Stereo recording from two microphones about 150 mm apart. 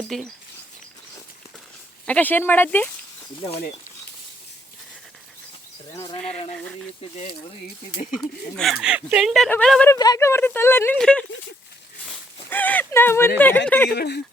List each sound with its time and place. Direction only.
0.1 s speech: centre (ahead or behind)
2.0 s speech: 10° left (ahead or behind)
7.9 s speech: 55° left (ahead or behind)
8.1 s speech: centre (ahead or behind)
9.9 s speech: 25° left (ahead or behind); by 11.3 s 5° left (ahead or behind)
12.5 s speech: 10° left (ahead or behind)
13.9 s speech: 90° left